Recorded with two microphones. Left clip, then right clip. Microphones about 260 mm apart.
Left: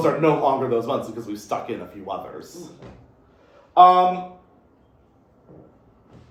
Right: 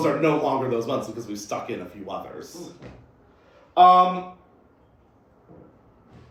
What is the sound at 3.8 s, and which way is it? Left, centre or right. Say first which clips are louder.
Speech: left 2 dB; centre.